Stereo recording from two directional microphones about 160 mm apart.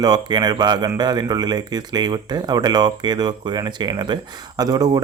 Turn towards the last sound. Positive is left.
turn(degrees=-25)  # may be behind; listen again after turning